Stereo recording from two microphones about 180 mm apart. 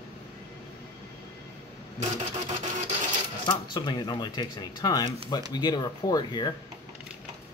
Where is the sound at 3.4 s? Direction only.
25° left (ahead or behind).